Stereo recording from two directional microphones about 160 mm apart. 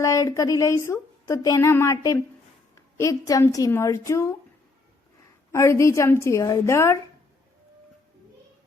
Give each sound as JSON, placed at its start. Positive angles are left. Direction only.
{"t": 0.0, "sound": "a woman's voice", "side_deg": 20}
{"t": 5.5, "sound": "a woman's voice", "side_deg": 15}